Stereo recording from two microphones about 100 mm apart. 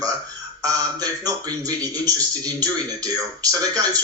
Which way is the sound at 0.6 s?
35° right (ahead or behind).